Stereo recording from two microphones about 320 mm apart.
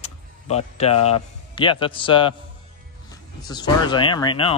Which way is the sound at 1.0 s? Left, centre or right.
Centre.